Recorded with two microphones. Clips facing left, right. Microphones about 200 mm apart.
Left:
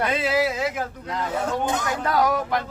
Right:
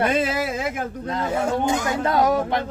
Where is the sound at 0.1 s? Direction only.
50° right (ahead or behind).